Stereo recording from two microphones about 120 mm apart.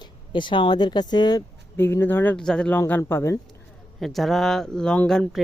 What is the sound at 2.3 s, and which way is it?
Speech, 5° left (ahead or behind).